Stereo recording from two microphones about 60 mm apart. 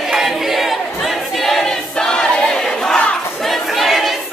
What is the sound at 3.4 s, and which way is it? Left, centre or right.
Crowd, centre.